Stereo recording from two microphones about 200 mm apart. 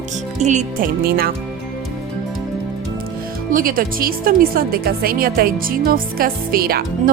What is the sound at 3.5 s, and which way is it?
Speech, 45° right (ahead or behind).